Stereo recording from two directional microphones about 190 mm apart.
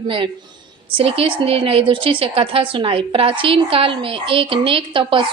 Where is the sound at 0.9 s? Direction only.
30° right (ahead or behind).